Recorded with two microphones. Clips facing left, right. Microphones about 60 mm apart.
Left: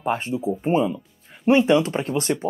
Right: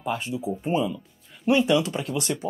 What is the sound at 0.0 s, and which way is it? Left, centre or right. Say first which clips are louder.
Speech: left 4 dB; left.